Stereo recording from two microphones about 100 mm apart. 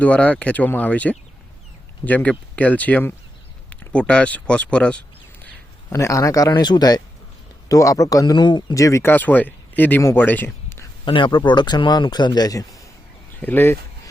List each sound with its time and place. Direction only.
0.0 s speech: 15° left (ahead or behind)
5.9 s speech: 30° left (ahead or behind)
6.5 s speech: 45° left (ahead or behind)
8.7 s speech: 30° left (ahead or behind)
9.1 s speech: 15° left (ahead or behind)
11.0 s speech: 55° left (ahead or behind); by 12.8 s 35° left (ahead or behind)
13.4 s speech: 20° left (ahead or behind)